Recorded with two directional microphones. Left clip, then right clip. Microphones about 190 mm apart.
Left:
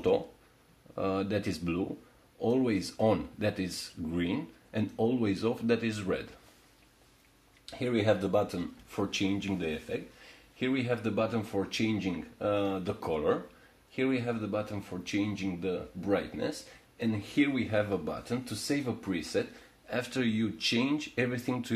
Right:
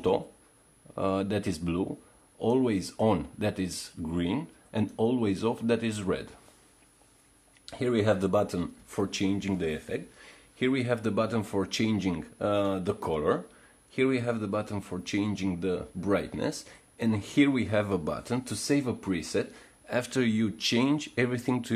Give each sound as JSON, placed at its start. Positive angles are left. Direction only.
{"t": 0.9, "sound": "speech", "side_deg": -25}
{"t": 7.6, "sound": "a man's voice", "side_deg": -40}